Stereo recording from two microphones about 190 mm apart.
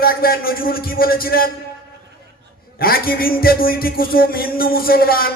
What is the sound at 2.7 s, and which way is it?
A man's voice, 50° left (ahead or behind).